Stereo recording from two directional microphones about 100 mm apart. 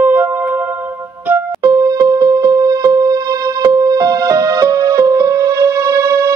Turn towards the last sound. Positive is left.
turn(degrees=-35)  # may be behind; listen again after turning